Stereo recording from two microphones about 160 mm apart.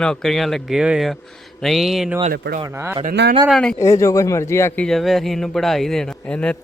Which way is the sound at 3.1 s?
90° right.